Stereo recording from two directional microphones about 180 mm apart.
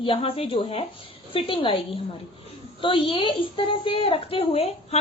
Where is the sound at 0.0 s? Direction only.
30° left (ahead or behind).